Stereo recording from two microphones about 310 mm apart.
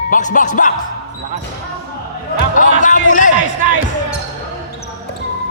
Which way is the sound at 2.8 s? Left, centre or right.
Left.